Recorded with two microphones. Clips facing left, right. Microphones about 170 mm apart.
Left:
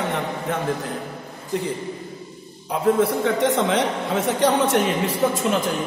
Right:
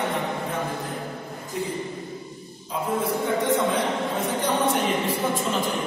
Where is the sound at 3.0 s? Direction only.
90° left.